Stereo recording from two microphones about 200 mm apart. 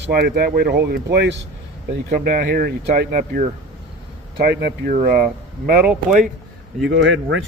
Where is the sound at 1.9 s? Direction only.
50° right (ahead or behind).